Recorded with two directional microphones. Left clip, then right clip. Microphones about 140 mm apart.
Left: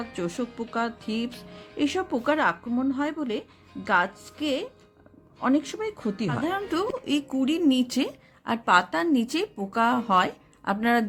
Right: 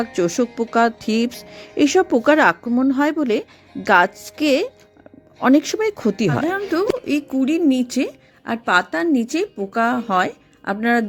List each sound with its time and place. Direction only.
0.1 s a woman's voice: 45° right (ahead or behind)
6.5 s a woman's voice: 35° right (ahead or behind)